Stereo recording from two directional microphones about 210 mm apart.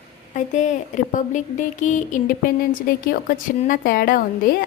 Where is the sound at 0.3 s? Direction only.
35° left (ahead or behind).